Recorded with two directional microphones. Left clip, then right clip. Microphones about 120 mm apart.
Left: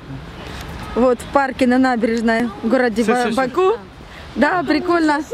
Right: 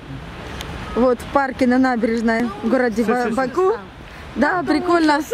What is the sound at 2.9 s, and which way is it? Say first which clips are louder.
Speech: left 2 dB; 35° left (ahead or behind).